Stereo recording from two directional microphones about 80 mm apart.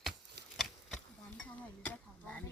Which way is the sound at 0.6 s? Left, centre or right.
Centre.